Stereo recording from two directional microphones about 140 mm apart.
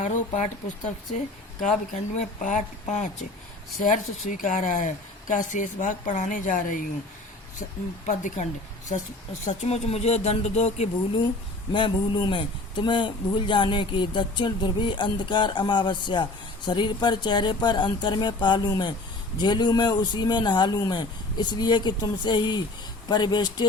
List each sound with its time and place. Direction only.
0.0 s a woman's voice: 60° left (ahead or behind)
1.6 s a woman's voice: 60° left (ahead or behind)
8.0 s a woman's voice: 60° left (ahead or behind)
11.7 s a man's voice: 35° left (ahead or behind)